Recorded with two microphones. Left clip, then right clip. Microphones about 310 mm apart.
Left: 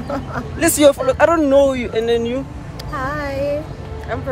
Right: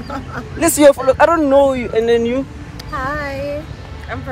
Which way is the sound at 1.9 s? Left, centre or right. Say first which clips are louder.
Right 3 dB; centre.